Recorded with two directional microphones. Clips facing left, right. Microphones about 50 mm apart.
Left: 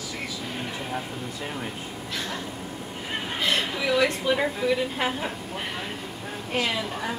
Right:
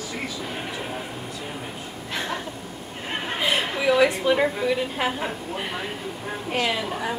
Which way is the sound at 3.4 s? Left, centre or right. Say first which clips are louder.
Right 3 dB; centre.